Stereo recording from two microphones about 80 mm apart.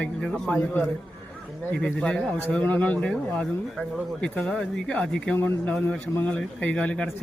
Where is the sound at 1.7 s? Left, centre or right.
Centre.